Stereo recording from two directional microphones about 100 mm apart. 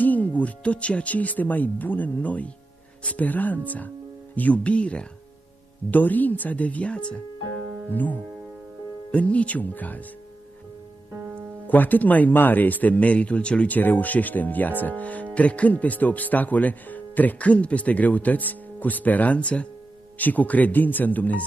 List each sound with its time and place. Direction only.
0.0 s speech: 15° left (ahead or behind)
11.1 s music: 20° right (ahead or behind)
11.7 s speech: 15° left (ahead or behind)